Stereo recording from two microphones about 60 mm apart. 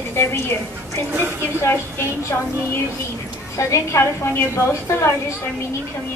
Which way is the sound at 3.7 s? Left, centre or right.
Left.